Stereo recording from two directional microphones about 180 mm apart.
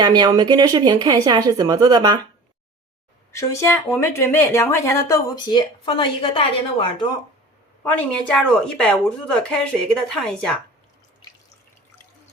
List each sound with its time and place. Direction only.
0.0 s speech: 25° right (ahead or behind)
3.3 s speech: 15° left (ahead or behind)
7.9 s speech: 5° left (ahead or behind)